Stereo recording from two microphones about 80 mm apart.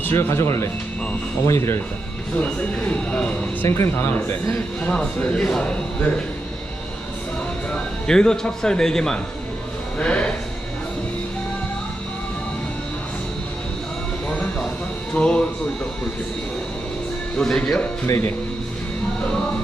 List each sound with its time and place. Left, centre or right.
0.0 s speech: left
2.4 s a man's voice: centre
3.7 s speech: left
4.8 s a man's voice: centre
7.7 s a man's voice: centre
10.0 s music: centre
14.3 s a sound: centre
15.1 s a man's voice: centre
17.3 s a man's voice: centre